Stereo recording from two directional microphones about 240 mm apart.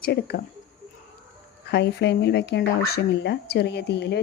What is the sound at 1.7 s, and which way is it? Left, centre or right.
Speech, left.